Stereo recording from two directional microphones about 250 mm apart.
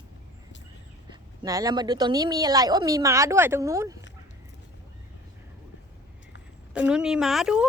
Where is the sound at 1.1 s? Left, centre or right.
Centre.